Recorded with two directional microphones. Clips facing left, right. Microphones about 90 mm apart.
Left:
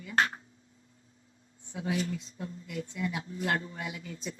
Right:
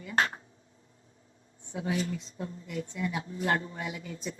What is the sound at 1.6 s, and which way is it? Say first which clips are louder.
Speech: right 1 dB; 30° right (ahead or behind).